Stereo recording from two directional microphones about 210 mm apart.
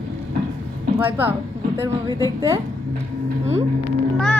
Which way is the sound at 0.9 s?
10° right (ahead or behind).